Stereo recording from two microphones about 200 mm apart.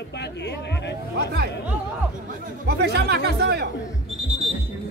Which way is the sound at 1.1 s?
55° right (ahead or behind).